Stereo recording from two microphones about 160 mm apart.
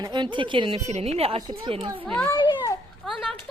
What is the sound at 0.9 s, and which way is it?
Speech, 45° right (ahead or behind).